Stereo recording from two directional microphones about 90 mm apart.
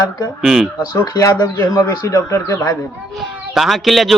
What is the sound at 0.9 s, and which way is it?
Speech, 40° left (ahead or behind).